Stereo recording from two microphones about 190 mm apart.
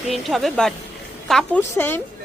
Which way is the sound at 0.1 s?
Centre (ahead or behind).